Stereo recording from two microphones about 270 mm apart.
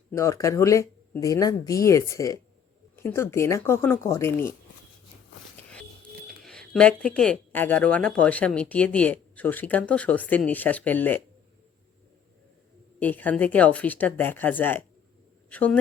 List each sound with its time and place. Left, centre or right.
0.1 s speech: centre
6.2 s speech: centre
13.0 s speech: centre